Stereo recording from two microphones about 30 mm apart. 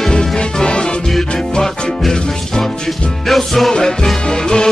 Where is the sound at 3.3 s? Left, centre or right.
Centre.